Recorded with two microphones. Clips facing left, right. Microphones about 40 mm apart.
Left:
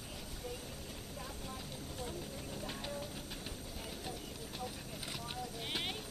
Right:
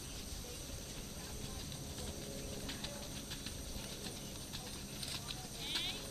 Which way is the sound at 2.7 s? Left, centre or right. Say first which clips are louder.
Left 4 dB; centre.